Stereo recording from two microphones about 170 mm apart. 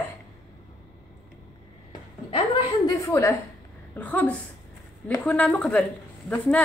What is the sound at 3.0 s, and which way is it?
A woman's voice, 15° left (ahead or behind).